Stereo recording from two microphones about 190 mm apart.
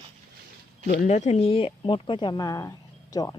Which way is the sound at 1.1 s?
35° left (ahead or behind).